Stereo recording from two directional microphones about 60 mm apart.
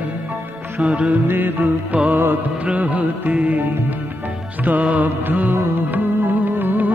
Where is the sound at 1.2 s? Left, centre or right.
Right.